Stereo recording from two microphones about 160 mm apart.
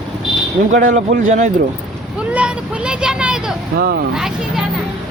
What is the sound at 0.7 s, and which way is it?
Speech, 50° right (ahead or behind).